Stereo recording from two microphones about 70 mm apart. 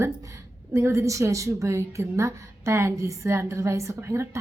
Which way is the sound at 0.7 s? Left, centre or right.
Right.